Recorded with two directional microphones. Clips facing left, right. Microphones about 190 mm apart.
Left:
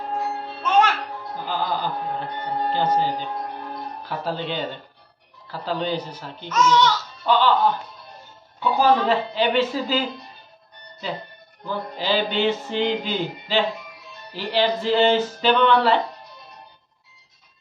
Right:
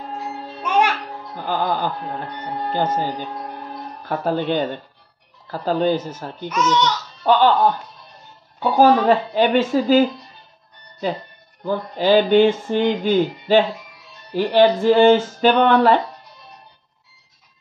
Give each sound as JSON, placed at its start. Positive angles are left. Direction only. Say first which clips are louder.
{"t": 0.6, "sound": "music", "louder": "even", "side_deg": -15}
{"t": 1.4, "sound": "speech", "louder": "right 4 dB", "side_deg": -50}
{"t": 4.1, "sound": "speech", "louder": "right 7 dB", "side_deg": -50}
{"t": 6.5, "sound": "speech", "louder": "left 1 dB", "side_deg": -20}
{"t": 7.2, "sound": "speech", "louder": "right 4 dB", "side_deg": -45}
{"t": 8.5, "sound": "speech", "louder": "right 4 dB", "side_deg": -45}
{"t": 11.6, "sound": "speech", "louder": "right 7 dB", "side_deg": -50}